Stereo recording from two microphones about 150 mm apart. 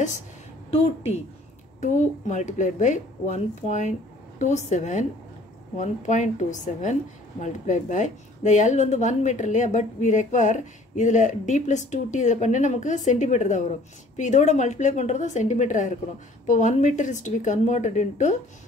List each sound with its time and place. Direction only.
1.8 s a woman's voice: 55° left (ahead or behind)